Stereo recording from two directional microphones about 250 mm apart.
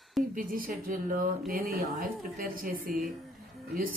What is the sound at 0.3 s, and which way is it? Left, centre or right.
Speech, right.